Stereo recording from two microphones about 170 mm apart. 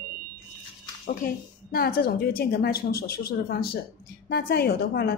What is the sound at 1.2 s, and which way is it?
A woman's voice, 60° left (ahead or behind).